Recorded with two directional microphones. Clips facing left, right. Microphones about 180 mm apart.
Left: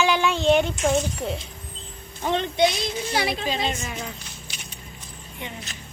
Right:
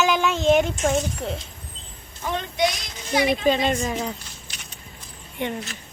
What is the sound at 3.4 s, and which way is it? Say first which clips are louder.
Speech: right 6 dB; 50° right (ahead or behind).